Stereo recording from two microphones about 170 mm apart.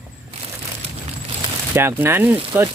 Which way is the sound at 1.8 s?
15° right (ahead or behind).